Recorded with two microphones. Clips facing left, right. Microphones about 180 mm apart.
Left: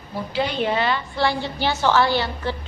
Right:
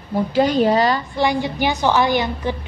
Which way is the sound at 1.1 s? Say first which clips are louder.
Right 3 dB; 15° right (ahead or behind).